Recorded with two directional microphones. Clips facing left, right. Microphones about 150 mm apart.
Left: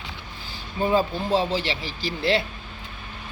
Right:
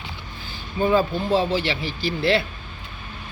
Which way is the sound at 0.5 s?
30° left (ahead or behind).